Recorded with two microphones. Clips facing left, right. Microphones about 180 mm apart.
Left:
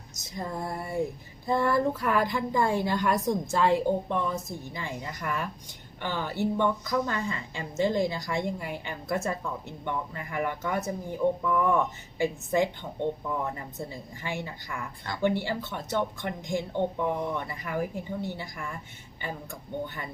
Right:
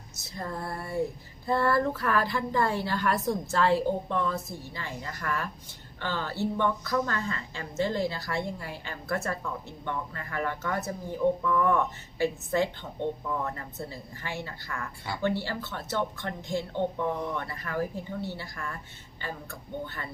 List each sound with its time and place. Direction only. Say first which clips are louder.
0.2 s a woman's voice: left 2 dB; 15° left (ahead or behind)